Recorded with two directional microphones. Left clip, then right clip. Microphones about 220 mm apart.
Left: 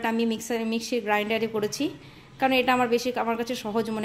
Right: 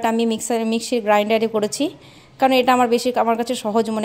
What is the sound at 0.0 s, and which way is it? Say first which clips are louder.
A woman's voice: right 7 dB; 35° right (ahead or behind).